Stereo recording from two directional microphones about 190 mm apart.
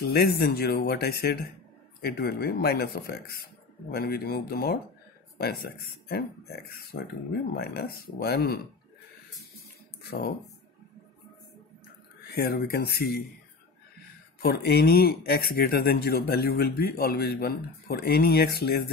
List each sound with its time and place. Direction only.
0.0 s speech: 55° left (ahead or behind)
10.0 s speech: 50° left (ahead or behind)
12.3 s speech: 55° left (ahead or behind)
14.4 s speech: 55° left (ahead or behind)